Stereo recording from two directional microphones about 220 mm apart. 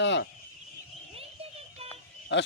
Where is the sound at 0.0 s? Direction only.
55° left (ahead or behind).